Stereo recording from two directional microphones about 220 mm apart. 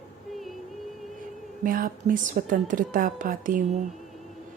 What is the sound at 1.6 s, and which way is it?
Speech, 40° right (ahead or behind).